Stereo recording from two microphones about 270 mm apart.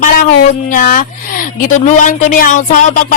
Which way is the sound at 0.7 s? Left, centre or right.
Left.